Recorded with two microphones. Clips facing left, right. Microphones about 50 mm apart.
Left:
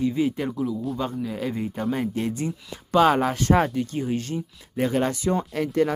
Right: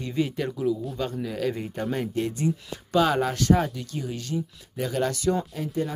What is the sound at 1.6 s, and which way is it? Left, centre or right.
Speech, centre.